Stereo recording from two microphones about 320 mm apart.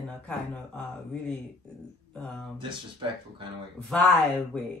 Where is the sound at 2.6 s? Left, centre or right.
Centre.